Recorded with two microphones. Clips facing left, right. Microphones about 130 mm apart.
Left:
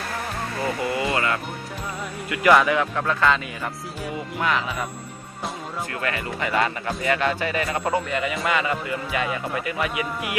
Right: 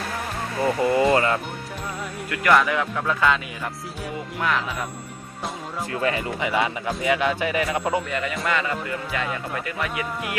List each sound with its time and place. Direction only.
0.8 s speech: 35° right (ahead or behind)
2.3 s a man's voice: 5° left (ahead or behind)
5.9 s speech: 25° right (ahead or behind)
6.5 s a man's voice: 5° right (ahead or behind); by 10.3 s 15° left (ahead or behind)